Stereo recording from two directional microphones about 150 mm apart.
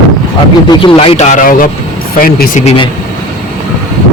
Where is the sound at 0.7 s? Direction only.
35° left (ahead or behind); by 1.7 s 60° left (ahead or behind).